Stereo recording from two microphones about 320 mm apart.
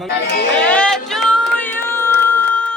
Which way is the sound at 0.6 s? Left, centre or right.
Centre.